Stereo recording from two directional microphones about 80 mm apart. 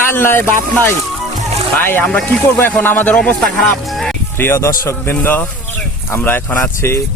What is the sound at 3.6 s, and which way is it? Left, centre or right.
Music, centre.